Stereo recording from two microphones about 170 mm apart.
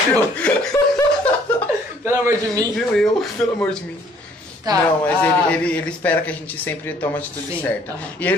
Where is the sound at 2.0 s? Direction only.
15° right (ahead or behind).